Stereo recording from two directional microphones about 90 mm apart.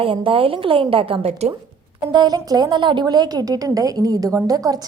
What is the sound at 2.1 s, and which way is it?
A woman's voice, 50° right (ahead or behind).